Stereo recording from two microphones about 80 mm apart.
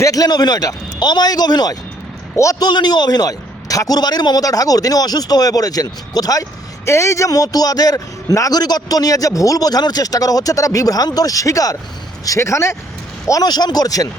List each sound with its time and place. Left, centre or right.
0.0 s a man's voice: left
2.3 s speech: left
2.6 s a man's voice: left
13.4 s a man's voice: left